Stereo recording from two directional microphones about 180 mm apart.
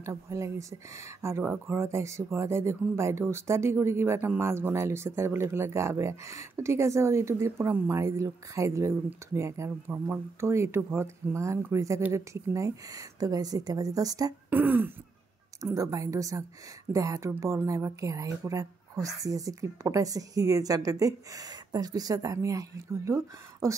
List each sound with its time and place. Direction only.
0.0 s a woman's voice: 15° right (ahead or behind)